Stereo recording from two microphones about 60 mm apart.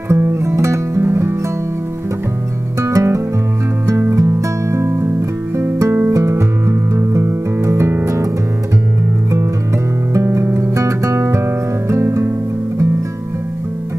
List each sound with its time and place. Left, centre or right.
0.1 s music: right
2.8 s music: right
6.1 s music: right
10.1 s guitar: right
11.9 s music: right